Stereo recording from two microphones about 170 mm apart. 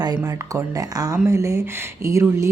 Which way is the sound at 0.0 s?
20° right (ahead or behind).